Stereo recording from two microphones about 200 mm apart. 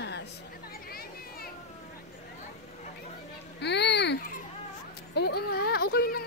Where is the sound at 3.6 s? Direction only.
60° left (ahead or behind).